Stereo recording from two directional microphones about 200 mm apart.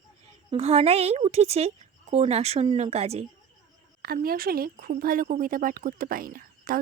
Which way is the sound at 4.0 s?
50° right (ahead or behind).